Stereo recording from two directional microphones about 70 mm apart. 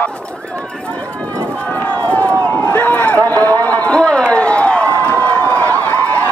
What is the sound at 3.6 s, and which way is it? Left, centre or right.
Run, left.